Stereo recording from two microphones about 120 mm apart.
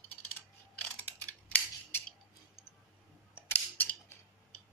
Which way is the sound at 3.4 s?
15° left (ahead or behind).